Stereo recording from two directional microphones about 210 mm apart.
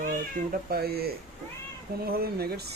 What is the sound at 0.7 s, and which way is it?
Speech, 45° right (ahead or behind).